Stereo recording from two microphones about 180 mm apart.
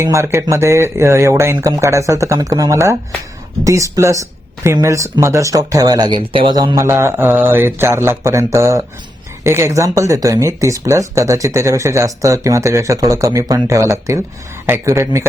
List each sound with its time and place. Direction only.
0.0 s speech: 15° right (ahead or behind)